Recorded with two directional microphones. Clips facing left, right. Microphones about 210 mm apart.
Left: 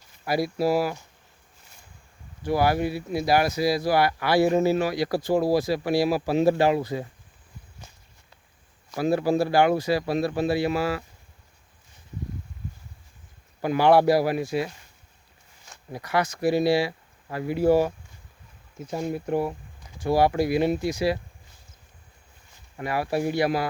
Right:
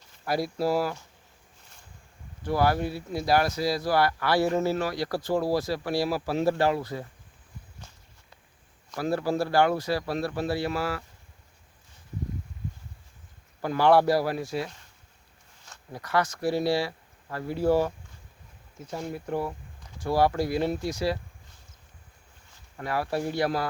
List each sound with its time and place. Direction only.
0.3 s speech: 10° left (ahead or behind)
2.4 s speech: 10° left (ahead or behind)
8.9 s speech: 15° left (ahead or behind)
13.6 s speech: 15° left (ahead or behind)
22.8 s speech: 10° left (ahead or behind)